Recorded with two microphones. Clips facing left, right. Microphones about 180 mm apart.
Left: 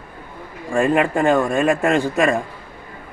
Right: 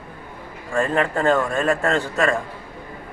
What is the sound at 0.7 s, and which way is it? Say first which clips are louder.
A man's voice: left 4 dB; 10° left (ahead or behind).